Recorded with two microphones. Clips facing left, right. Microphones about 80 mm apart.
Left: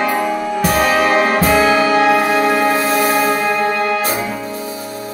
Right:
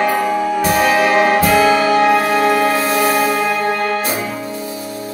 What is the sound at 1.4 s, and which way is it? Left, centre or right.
Music, left.